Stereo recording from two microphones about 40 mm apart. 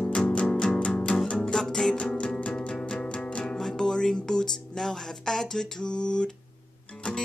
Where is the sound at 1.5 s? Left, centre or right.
Centre.